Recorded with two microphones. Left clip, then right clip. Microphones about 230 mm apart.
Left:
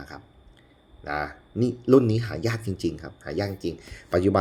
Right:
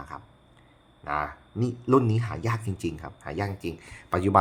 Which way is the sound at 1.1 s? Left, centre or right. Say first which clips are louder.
Even; centre.